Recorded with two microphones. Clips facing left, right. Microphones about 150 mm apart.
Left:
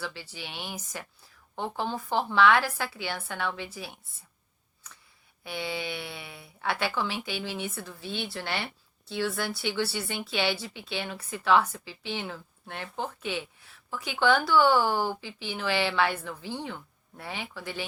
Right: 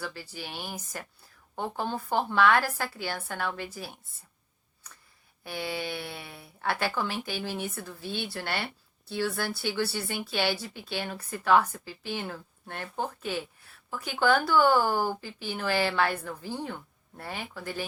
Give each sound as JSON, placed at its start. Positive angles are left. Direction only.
{"t": 0.0, "sound": "a woman's voice", "side_deg": -45}
{"t": 2.1, "sound": "a woman's voice", "side_deg": -50}
{"t": 5.5, "sound": "a woman's voice", "side_deg": -45}